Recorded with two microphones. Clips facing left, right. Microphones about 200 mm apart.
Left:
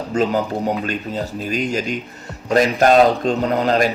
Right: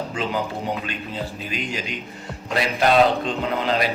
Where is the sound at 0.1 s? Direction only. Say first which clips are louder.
Left 7 dB; 40° left (ahead or behind).